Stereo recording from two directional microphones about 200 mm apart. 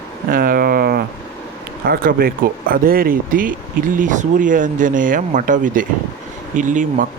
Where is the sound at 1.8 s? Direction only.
50° right (ahead or behind).